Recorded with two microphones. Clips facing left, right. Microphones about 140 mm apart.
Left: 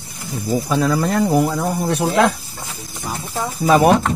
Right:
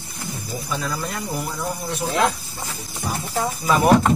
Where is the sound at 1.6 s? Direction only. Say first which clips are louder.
Left 7 dB; 55° left (ahead or behind).